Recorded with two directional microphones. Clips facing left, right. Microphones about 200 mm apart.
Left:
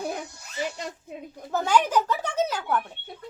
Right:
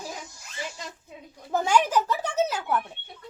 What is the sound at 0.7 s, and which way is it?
Speech, 65° left (ahead or behind).